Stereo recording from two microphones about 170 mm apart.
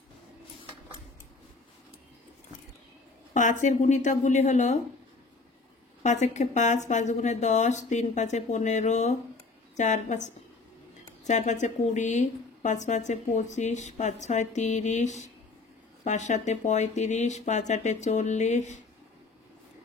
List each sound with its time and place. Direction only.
3.3 s a woman's voice: 45° left (ahead or behind)
6.0 s a woman's voice: 45° left (ahead or behind)